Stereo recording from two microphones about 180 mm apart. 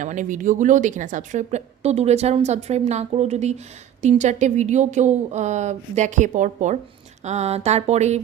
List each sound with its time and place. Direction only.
0.0 s a woman's voice: 45° right (ahead or behind)